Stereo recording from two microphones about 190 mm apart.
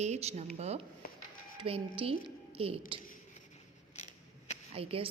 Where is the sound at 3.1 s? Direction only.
35° left (ahead or behind).